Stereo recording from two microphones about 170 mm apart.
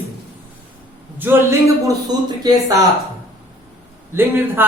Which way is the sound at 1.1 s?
15° right (ahead or behind).